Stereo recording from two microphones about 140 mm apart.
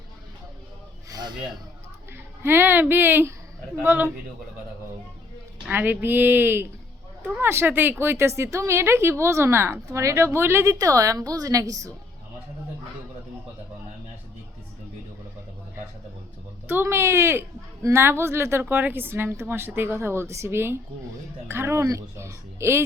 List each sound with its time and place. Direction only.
1.1 s a sound: 30° right (ahead or behind)
2.4 s a woman's voice: 15° right (ahead or behind)
5.6 s a woman's voice: 10° right (ahead or behind)
16.6 s a woman's voice: 15° right (ahead or behind)